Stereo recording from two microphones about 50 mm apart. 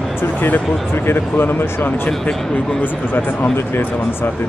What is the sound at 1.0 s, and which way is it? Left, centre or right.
Speech, left.